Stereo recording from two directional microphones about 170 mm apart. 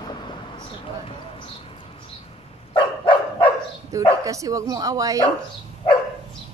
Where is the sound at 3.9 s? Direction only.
20° right (ahead or behind).